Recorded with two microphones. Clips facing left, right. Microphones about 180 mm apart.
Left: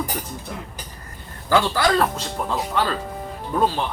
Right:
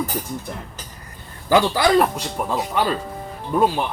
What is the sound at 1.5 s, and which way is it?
Speech, 15° right (ahead or behind).